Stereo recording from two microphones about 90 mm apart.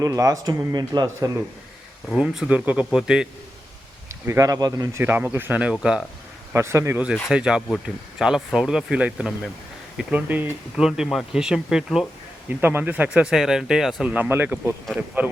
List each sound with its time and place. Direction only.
0.0 s a man's voice: 40° right (ahead or behind)
2.1 s speech: 5° right (ahead or behind)
2.5 s speech: 15° right (ahead or behind)
4.3 s a man's voice: 40° right (ahead or behind)
4.9 s speech: 25° right (ahead or behind)
6.5 s a man's voice: 30° right (ahead or behind)
6.9 s speech: 10° right (ahead or behind)
10.8 s speech: 5° right (ahead or behind)
12.5 s speech: 20° right (ahead or behind)
13.2 s speech: 5° right (ahead or behind)
14.1 s speech: 20° right (ahead or behind)